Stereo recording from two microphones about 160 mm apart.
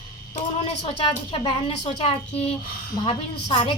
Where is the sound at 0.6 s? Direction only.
35° left (ahead or behind).